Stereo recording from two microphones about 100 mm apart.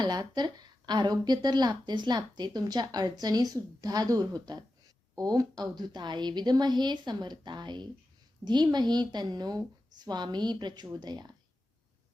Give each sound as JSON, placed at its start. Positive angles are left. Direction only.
{"t": 0.0, "sound": "a woman's voice", "side_deg": -45}